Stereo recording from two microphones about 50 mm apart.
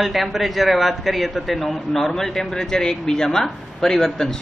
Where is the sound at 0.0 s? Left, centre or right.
Centre.